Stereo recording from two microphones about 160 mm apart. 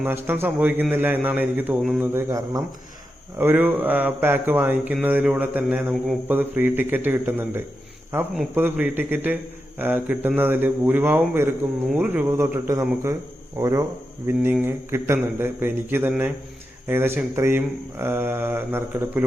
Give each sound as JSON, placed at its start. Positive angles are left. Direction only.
{"t": 0.0, "sound": "a man's voice", "side_deg": -15}